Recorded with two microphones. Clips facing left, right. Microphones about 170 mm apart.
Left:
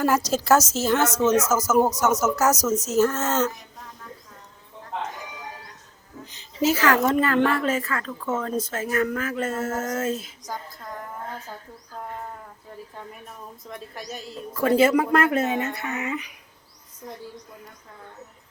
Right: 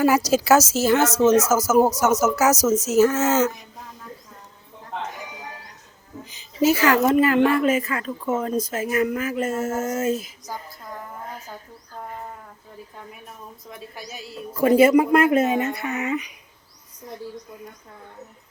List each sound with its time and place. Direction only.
0.0 s speech: 5° right (ahead or behind)
6.3 s speech: 10° right (ahead or behind)
13.7 s speech: 5° right (ahead or behind)
15.8 s a sound: 25° right (ahead or behind)